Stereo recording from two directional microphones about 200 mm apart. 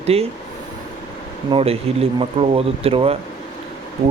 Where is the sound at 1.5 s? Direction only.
30° right (ahead or behind).